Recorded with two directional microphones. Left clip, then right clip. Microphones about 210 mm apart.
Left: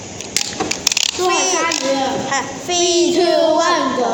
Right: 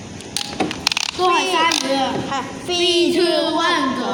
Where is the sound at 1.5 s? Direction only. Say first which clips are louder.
Right 2 dB; 50° right (ahead or behind).